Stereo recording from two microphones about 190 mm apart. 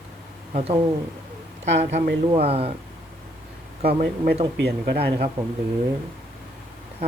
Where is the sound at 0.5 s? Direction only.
30° right (ahead or behind).